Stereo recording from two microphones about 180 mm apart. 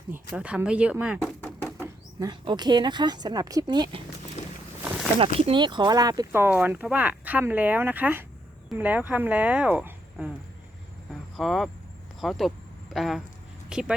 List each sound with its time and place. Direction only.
0.1 s speech: 10° right (ahead or behind)
1.4 s a sound: 10° left (ahead or behind)
2.1 s speech: 25° right (ahead or behind)
5.2 s speech: 30° right (ahead or behind); by 10.3 s 5° right (ahead or behind)
11.3 s speech: centre (ahead or behind)